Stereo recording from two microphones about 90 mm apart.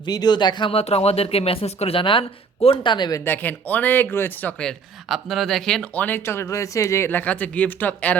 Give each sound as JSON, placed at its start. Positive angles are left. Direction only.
{"t": 0.0, "sound": "speech", "side_deg": 50}
{"t": 0.7, "sound": "speech", "side_deg": 90}
{"t": 2.6, "sound": "speech", "side_deg": 60}
{"t": 3.2, "sound": "speech", "side_deg": 20}
{"t": 5.0, "sound": "speech", "side_deg": 0}
{"t": 5.9, "sound": "speech", "side_deg": 20}